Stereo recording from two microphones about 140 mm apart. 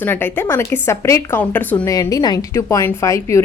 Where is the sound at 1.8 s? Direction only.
25° left (ahead or behind).